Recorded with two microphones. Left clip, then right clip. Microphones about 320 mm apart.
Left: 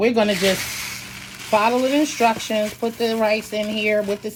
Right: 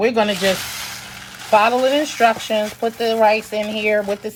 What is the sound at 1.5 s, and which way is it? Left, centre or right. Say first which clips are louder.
Speech: right 3 dB; right.